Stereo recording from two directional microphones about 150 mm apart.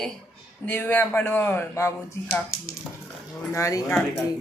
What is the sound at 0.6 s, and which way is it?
Speech, 10° left (ahead or behind).